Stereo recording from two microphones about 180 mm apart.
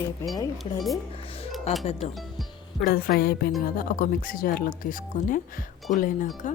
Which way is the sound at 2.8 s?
55° left (ahead or behind).